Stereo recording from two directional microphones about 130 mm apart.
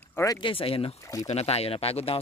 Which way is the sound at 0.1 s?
25° left (ahead or behind).